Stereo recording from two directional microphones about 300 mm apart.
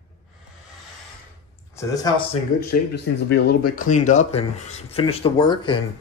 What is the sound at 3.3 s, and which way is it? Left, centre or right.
Speech, left.